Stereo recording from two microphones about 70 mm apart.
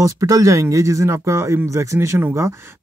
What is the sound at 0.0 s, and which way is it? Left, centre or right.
Speech, right.